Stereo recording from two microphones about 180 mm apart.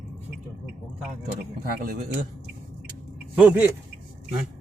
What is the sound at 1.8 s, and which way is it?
Speech, 55° right (ahead or behind).